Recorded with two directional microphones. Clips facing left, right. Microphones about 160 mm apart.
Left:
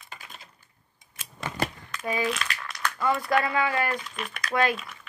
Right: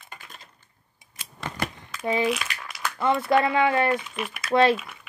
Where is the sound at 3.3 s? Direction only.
25° right (ahead or behind).